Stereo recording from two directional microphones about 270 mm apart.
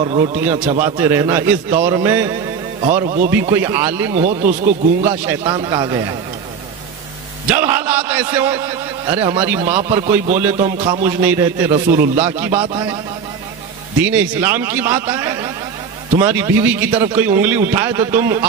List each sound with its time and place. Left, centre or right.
0.0 s speech: right
3.3 s speech: centre
4.1 s speech: right
5.3 s speech: centre
7.5 s a man's voice: centre
11.9 s speech: right
12.3 s speech: centre
14.1 s speech: centre